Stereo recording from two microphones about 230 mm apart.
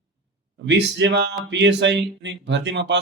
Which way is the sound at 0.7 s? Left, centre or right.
Right.